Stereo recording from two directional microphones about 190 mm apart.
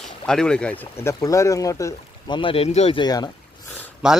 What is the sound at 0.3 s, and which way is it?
Speech, 5° left (ahead or behind).